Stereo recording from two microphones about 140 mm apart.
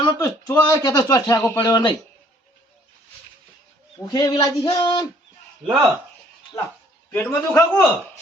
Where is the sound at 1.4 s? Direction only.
15° left (ahead or behind).